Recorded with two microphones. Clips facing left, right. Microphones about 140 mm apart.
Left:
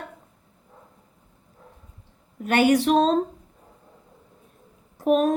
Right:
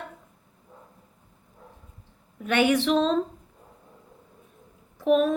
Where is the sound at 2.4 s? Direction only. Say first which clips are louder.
Left 3 dB; 40° left (ahead or behind).